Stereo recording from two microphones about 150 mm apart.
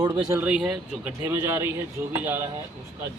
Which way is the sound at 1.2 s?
15° right (ahead or behind).